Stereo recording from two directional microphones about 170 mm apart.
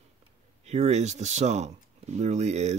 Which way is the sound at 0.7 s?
40° right (ahead or behind).